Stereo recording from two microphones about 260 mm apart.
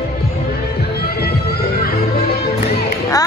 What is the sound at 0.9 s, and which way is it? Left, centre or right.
Music, left.